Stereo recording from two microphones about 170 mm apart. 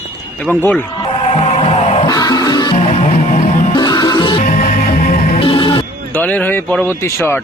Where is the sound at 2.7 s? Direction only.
40° left (ahead or behind).